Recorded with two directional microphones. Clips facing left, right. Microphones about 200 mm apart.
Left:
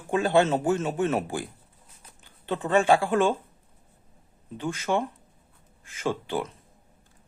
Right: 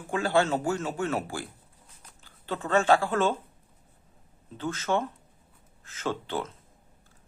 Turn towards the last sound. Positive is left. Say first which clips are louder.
# left 3 dB
turn(degrees=15)  # may be behind; listen again after turning